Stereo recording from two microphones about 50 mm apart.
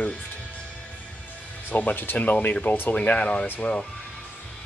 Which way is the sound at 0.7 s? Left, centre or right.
Left.